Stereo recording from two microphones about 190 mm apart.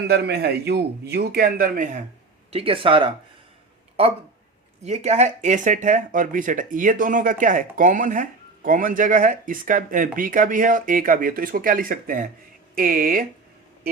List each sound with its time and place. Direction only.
0.1 s a man's voice: 55° right (ahead or behind)
2.5 s speech: 30° right (ahead or behind); by 13.2 s 50° right (ahead or behind)